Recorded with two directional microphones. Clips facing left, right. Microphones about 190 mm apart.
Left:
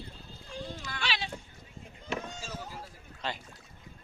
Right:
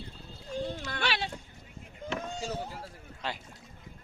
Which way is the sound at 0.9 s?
60° right (ahead or behind).